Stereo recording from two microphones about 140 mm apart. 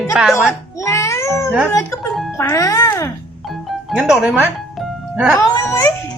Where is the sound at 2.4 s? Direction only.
20° left (ahead or behind).